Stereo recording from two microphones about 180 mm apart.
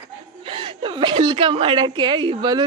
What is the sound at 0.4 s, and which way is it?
A woman's voice, 30° right (ahead or behind).